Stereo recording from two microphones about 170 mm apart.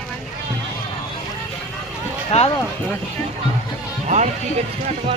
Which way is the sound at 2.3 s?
35° left (ahead or behind).